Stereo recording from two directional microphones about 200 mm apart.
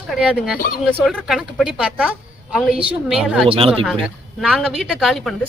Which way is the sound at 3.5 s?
30° right (ahead or behind).